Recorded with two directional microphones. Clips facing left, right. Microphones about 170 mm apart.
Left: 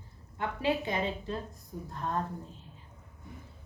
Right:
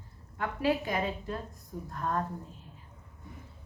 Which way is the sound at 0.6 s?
25° left (ahead or behind).